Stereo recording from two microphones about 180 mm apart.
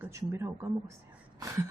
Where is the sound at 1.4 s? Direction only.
20° right (ahead or behind).